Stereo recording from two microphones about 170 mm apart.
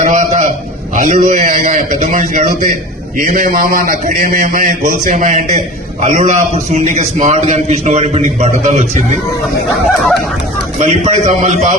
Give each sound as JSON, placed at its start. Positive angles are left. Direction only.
{"t": 0.0, "sound": "a sound", "side_deg": -50}
{"t": 0.9, "sound": "a man's voice", "side_deg": -50}
{"t": 10.8, "sound": "a man's voice", "side_deg": -40}